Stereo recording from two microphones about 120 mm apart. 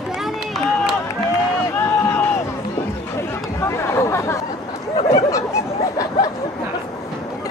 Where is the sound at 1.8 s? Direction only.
20° left (ahead or behind).